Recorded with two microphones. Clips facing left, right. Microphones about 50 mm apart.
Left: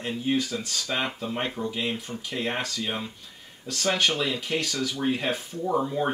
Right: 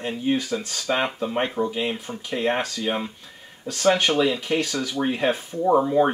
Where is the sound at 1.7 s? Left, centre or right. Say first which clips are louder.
Right 3 dB; right.